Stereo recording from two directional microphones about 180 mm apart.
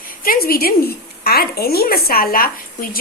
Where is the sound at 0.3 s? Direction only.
55° left (ahead or behind).